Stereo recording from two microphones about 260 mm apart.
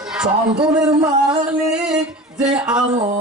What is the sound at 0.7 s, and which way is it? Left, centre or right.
Speech, centre.